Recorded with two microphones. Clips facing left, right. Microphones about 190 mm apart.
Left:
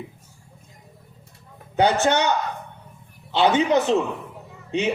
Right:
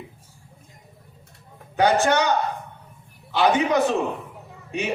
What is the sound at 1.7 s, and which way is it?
Speech, 25° left (ahead or behind).